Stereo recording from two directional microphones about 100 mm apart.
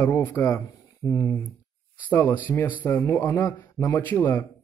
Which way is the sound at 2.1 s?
20° left (ahead or behind).